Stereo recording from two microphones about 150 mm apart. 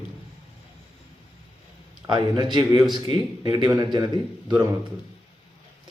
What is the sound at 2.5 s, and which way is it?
A man's voice, 30° right (ahead or behind).